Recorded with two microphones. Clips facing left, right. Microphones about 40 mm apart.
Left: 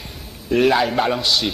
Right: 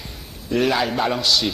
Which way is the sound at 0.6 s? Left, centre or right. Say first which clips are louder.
Left 3 dB; centre.